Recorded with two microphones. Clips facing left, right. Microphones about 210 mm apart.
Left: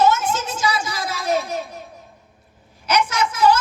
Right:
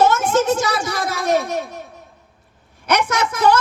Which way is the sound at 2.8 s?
60° right (ahead or behind).